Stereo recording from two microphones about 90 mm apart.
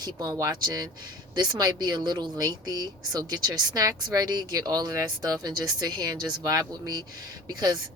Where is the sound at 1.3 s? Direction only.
50° right (ahead or behind).